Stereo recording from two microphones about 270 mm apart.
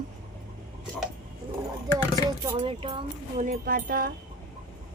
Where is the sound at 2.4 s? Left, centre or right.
Centre.